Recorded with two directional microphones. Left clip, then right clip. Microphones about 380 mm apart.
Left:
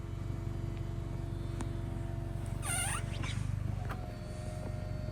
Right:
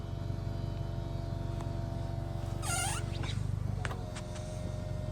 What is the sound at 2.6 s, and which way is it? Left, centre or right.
Rodents, right.